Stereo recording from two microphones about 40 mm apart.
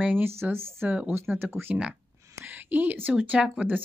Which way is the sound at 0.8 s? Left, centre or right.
Right.